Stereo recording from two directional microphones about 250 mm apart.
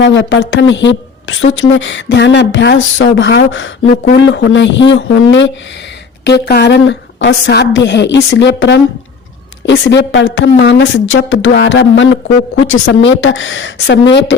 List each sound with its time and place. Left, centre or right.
0.0 s a woman's voice: left